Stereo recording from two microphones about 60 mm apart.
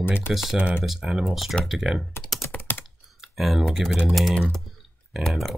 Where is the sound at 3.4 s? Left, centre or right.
Centre.